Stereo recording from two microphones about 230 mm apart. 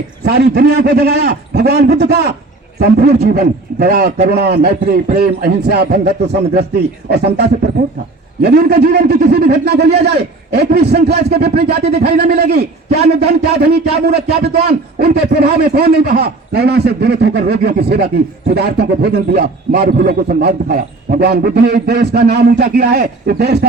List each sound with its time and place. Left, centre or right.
0.3 s a man's voice: right